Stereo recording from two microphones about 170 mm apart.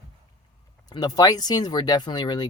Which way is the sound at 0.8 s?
25° left (ahead or behind).